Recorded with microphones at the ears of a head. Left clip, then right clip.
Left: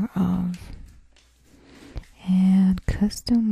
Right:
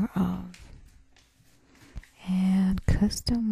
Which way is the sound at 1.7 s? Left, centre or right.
Left.